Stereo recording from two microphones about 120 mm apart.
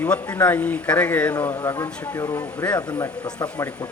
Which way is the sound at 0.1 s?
10° left (ahead or behind).